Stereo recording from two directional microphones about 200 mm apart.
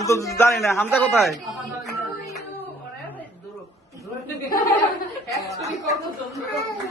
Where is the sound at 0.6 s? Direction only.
Centre (ahead or behind).